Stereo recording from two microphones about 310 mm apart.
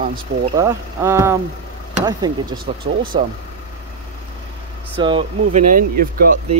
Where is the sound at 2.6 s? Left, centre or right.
Right.